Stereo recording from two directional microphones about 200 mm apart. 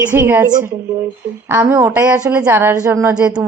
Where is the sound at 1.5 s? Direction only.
10° right (ahead or behind).